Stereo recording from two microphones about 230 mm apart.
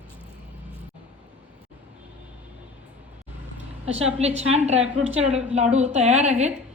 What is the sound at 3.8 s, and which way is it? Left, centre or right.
A woman's voice, right.